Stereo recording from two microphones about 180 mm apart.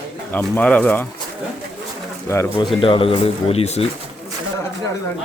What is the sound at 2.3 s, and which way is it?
Speech, 15° left (ahead or behind).